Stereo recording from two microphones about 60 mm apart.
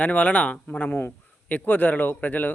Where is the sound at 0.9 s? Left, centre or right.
Left.